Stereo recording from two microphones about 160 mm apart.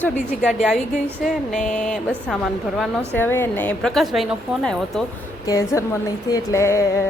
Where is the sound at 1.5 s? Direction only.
5° left (ahead or behind).